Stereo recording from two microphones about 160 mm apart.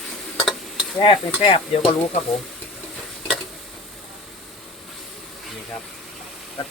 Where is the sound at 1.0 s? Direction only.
35° left (ahead or behind).